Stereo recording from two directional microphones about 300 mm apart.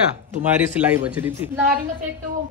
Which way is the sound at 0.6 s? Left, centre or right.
Centre.